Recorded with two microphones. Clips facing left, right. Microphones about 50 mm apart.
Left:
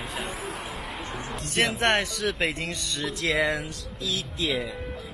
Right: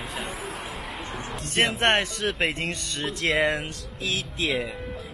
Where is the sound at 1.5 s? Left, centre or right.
Right.